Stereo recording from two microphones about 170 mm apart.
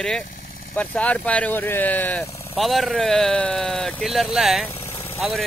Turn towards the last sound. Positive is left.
turn(degrees=15)  # may be behind; listen again after turning